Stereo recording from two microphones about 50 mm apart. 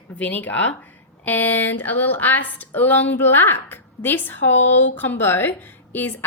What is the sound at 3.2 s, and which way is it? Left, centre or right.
A woman's voice, left.